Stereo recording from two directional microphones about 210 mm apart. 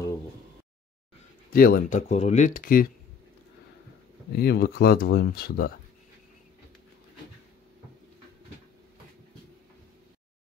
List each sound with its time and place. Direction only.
1.5 s speech: 45° left (ahead or behind)
4.3 s speech: 50° left (ahead or behind)